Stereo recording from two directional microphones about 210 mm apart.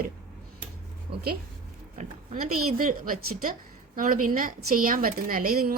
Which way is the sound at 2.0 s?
40° right (ahead or behind).